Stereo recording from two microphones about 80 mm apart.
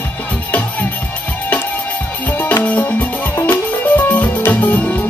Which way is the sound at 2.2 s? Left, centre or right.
Left.